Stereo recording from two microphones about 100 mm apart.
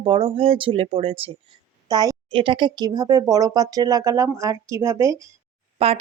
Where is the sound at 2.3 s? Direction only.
60° right (ahead or behind); by 5.3 s 30° right (ahead or behind).